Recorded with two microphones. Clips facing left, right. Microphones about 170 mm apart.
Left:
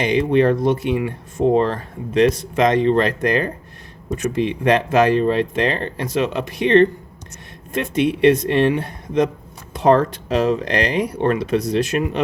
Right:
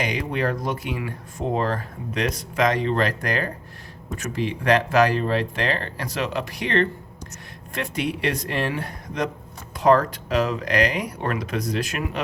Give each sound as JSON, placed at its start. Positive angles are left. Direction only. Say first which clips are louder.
{"t": 0.0, "sound": "speech", "louder": "left 9 dB", "side_deg": 25}